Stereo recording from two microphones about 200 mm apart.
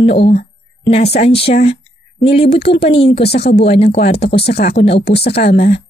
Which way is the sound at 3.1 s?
55° left (ahead or behind).